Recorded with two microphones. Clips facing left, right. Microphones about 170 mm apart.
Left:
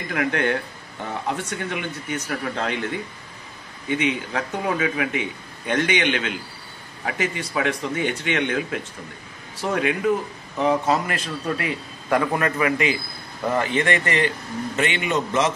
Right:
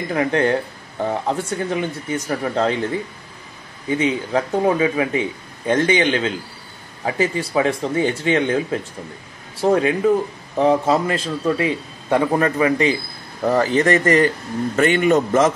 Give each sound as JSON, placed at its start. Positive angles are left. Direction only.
{"t": 0.1, "sound": "a man's voice", "side_deg": -30}